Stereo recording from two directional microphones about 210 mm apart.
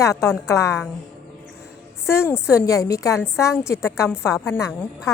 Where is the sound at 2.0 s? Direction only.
10° left (ahead or behind).